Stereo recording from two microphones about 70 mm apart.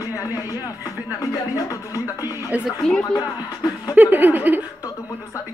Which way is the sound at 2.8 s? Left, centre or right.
Centre.